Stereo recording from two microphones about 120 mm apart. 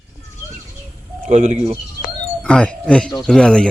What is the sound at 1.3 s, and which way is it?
Speech, 75° right (ahead or behind).